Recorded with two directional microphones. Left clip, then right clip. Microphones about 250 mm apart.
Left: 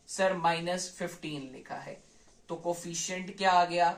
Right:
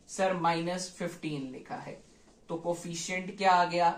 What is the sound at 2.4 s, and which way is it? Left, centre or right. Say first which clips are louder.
Speech: even; left.